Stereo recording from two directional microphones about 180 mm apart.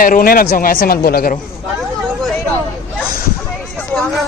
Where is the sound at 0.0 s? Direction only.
55° left (ahead or behind).